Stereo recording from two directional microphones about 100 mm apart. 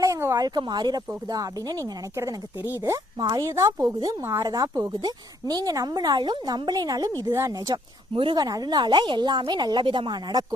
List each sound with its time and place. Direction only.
0.0 s a sound: 30° right (ahead or behind)
0.3 s a woman's voice: 45° right (ahead or behind); by 2.6 s 30° right (ahead or behind)
3.2 s a woman's voice: 45° right (ahead or behind)
3.4 s speech: 30° right (ahead or behind)
4.2 s a woman's voice: 25° right (ahead or behind)
4.4 s speech: 40° right (ahead or behind)
8.1 s a woman's voice: 60° right (ahead or behind)
8.4 s a woman's voice: 40° right (ahead or behind)